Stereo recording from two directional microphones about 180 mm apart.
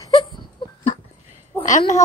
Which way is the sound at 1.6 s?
45° left (ahead or behind).